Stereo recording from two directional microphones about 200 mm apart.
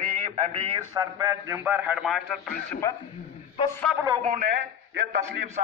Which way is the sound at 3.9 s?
15° right (ahead or behind).